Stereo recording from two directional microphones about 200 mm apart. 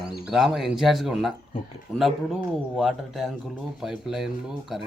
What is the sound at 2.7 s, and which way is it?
A man's voice, centre (ahead or behind).